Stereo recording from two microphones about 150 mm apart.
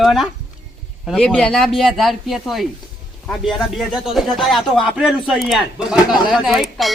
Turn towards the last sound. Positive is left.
turn(degrees=0)  # may be behind; listen again after turning